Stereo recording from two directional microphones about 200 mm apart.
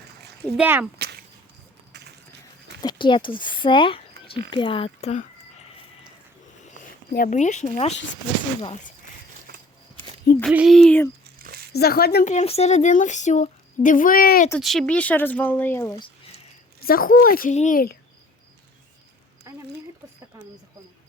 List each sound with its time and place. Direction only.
0.5 s speech: 5° right (ahead or behind)
0.9 s a sound: 55° right (ahead or behind)
2.8 s speech: 25° left (ahead or behind)
7.1 s speech: 40° left (ahead or behind)
10.4 s a sound: 5° right (ahead or behind)
11.3 s a sound: 50° right (ahead or behind)
11.7 s a child's voice: 50° left (ahead or behind)
12.3 s speech: 35° left (ahead or behind)
14.6 s speech: centre (ahead or behind)
16.8 s a child's voice: 45° left (ahead or behind)